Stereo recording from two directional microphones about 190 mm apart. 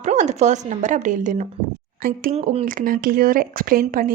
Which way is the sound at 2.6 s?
45° right (ahead or behind).